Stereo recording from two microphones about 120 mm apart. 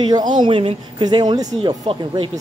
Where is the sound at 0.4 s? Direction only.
50° right (ahead or behind).